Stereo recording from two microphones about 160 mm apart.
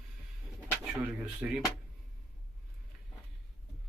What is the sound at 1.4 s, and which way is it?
Speech, 10° right (ahead or behind).